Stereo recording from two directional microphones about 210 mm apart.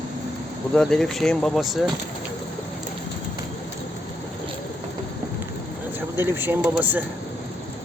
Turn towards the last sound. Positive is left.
turn(degrees=-10)  # may be behind; listen again after turning